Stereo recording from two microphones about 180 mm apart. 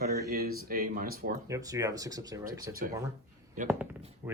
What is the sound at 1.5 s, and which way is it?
Speech, 20° right (ahead or behind).